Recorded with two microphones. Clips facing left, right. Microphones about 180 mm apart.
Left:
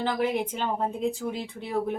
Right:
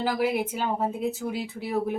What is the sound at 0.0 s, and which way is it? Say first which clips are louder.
Speech: right 1 dB; 10° right (ahead or behind).